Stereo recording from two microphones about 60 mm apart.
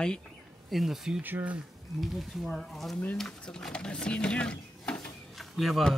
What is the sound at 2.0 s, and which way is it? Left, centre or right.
Speech, centre.